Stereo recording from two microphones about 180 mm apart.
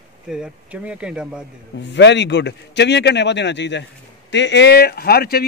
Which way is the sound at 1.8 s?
75° left (ahead or behind).